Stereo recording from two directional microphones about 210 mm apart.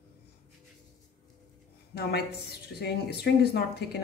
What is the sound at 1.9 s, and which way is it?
Speech, 50° left (ahead or behind).